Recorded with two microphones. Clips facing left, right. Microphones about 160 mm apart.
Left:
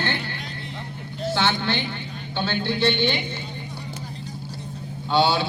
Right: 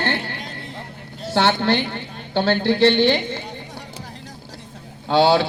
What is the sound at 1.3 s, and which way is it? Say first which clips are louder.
A woman's voice: right 7 dB; 65° right (ahead or behind).